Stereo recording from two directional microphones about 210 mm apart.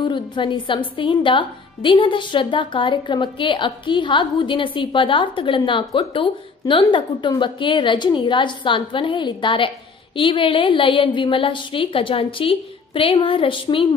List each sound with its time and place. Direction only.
0.0 s a woman's voice: 20° left (ahead or behind)